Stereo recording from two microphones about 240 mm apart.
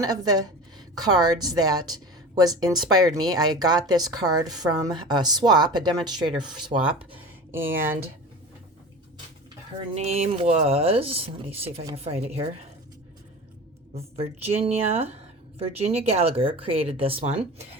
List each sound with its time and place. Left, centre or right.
0.0 s a woman's voice: centre
9.9 s speech: right
13.9 s speech: right